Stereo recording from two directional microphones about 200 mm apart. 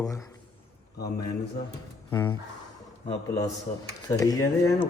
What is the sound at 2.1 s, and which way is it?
Speech, 15° left (ahead or behind).